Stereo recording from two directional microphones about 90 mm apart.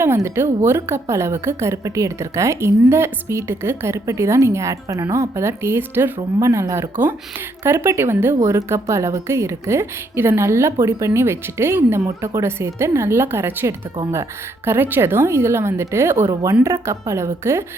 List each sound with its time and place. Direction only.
0.0 s a woman's voice: 30° right (ahead or behind)